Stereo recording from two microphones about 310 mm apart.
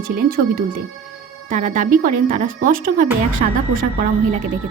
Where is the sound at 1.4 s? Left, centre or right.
Right.